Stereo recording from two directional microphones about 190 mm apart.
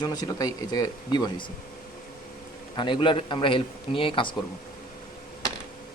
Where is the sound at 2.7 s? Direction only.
25° left (ahead or behind).